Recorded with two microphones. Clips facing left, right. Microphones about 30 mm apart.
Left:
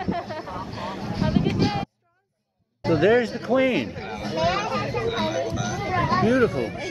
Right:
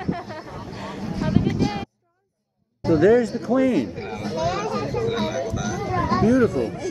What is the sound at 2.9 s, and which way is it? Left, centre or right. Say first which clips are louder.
A man's voice: right 2 dB; left.